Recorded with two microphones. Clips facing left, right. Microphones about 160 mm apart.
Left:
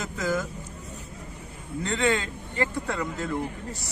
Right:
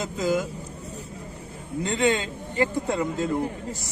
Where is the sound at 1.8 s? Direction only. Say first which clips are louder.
Right 2 dB; 20° right (ahead or behind).